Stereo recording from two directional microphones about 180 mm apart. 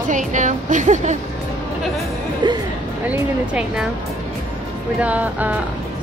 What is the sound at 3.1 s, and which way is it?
Speech, 5° right (ahead or behind).